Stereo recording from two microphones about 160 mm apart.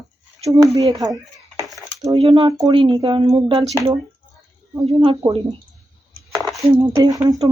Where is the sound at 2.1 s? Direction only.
35° right (ahead or behind).